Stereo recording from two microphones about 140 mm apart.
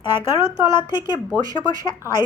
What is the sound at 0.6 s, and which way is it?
Speech, 35° left (ahead or behind).